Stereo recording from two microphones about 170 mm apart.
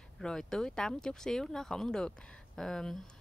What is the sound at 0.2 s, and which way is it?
Speech, 5° left (ahead or behind).